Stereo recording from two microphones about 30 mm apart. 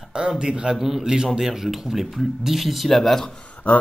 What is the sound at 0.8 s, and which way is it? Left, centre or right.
Speech, centre.